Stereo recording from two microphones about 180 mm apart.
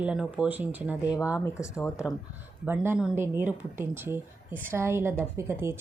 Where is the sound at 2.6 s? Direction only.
10° right (ahead or behind).